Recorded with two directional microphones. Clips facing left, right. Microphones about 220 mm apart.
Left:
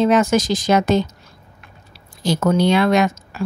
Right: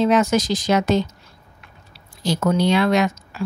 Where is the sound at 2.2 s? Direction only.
50° left (ahead or behind).